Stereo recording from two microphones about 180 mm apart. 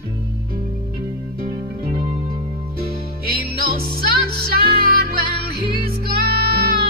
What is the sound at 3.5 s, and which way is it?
Music, 60° right (ahead or behind).